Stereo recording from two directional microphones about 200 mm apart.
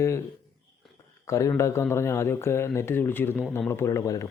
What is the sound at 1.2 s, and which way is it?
Speech, 15° left (ahead or behind).